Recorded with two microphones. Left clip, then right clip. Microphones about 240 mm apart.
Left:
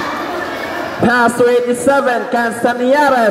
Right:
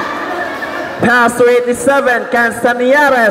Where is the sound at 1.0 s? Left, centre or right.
Centre.